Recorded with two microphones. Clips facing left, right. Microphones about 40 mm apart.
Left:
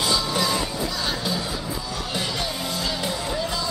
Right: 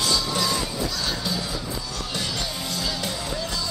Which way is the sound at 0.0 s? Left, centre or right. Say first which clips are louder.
Left 1 dB; centre.